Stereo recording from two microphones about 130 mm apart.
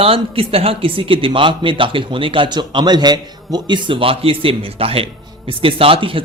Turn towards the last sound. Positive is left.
turn(degrees=-45)  # may be behind; listen again after turning